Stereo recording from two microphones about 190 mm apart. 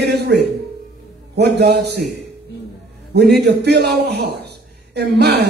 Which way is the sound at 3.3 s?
60° right (ahead or behind).